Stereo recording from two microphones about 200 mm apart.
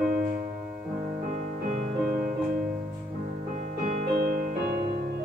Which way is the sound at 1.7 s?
35° right (ahead or behind).